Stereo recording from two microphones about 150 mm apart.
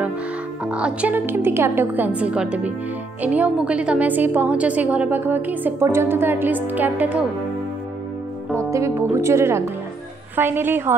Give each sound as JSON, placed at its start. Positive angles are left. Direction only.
{"t": 0.7, "sound": "a woman's voice", "side_deg": -10}
{"t": 8.5, "sound": "a woman's voice", "side_deg": -20}